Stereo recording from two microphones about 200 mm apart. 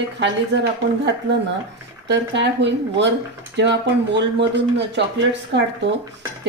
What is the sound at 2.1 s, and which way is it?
Speech, 60° right (ahead or behind).